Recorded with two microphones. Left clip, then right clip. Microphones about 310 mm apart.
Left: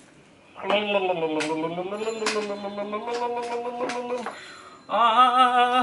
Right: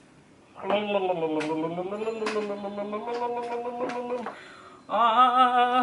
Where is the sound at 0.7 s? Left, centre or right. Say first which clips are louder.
Left 3 dB; centre.